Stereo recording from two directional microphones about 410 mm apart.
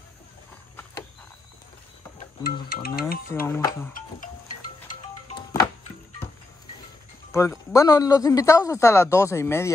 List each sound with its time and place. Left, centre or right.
2.1 s music: centre
3.4 s speech: centre
4.8 s music: centre
7.3 s speech: centre